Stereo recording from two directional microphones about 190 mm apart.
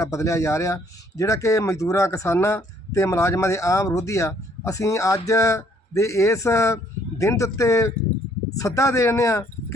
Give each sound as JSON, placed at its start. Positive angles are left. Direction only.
{"t": 0.0, "sound": "speech", "side_deg": 15}